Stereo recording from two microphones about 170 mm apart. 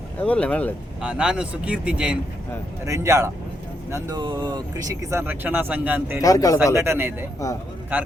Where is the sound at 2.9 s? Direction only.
15° right (ahead or behind).